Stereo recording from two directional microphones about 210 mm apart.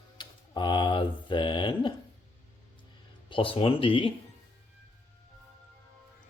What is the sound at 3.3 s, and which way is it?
Speech, 25° left (ahead or behind).